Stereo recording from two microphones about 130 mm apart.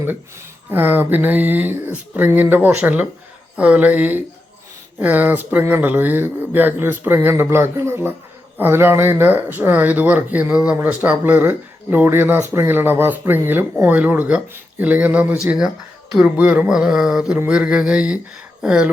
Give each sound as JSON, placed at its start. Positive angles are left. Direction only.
{"t": 0.7, "sound": "speech", "side_deg": -15}